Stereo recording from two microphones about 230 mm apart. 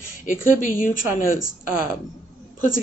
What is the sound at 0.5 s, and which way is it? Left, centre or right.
Speech, left.